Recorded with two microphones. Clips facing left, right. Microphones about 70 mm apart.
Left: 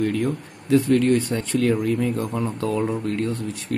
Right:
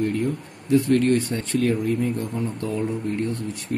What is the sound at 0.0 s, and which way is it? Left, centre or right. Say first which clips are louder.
Speech: left 1 dB; left.